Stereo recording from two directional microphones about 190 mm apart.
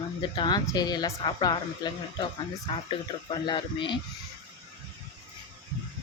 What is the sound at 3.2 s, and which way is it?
Speech, 25° left (ahead or behind).